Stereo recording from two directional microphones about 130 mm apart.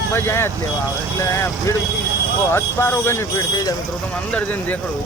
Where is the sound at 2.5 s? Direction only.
15° left (ahead or behind).